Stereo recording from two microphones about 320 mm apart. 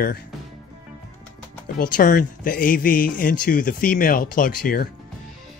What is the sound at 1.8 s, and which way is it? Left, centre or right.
Speech, left.